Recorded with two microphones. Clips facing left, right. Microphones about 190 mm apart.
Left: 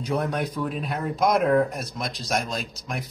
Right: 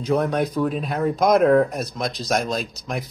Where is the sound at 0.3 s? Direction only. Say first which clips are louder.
Right 6 dB; 45° right (ahead or behind).